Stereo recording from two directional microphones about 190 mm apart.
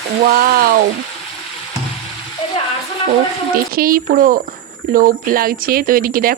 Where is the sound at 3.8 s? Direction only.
50° right (ahead or behind).